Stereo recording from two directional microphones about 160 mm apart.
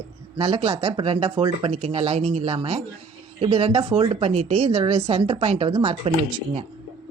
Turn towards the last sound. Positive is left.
turn(degrees=-35)  # may be behind; listen again after turning